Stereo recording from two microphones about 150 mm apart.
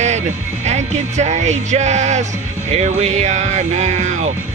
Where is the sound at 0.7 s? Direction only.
50° right (ahead or behind).